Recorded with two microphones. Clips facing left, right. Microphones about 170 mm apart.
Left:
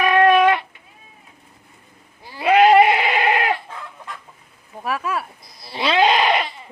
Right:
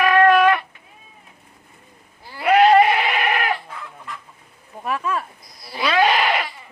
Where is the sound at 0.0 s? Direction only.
20° left (ahead or behind).